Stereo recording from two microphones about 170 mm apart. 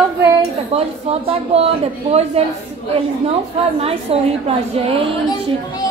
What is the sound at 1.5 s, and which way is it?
Speech, 35° right (ahead or behind).